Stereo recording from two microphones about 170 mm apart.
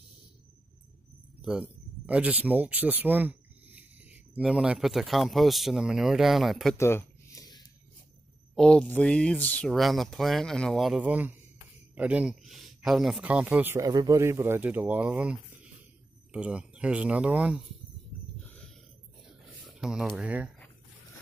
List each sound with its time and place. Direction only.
1.4 s speech: 5° right (ahead or behind)
6.8 s a sound: 15° left (ahead or behind)
8.5 s speech: 5° left (ahead or behind)
19.6 s speech: 5° right (ahead or behind)